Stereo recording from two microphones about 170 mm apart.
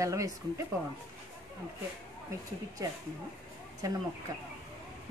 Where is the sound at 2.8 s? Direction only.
20° right (ahead or behind).